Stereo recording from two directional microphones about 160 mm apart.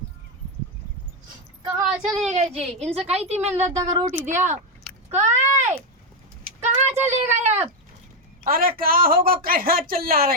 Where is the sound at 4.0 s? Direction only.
15° right (ahead or behind).